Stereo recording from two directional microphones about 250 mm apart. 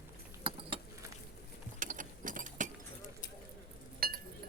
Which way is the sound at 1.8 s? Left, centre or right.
Right.